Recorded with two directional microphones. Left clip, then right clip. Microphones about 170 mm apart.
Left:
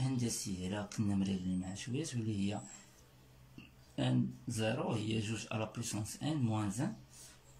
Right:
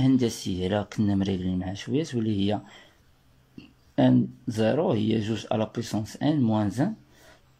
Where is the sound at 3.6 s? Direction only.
Centre (ahead or behind).